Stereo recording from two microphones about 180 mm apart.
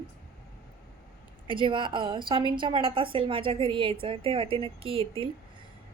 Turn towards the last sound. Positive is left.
turn(degrees=-30)  # may be behind; listen again after turning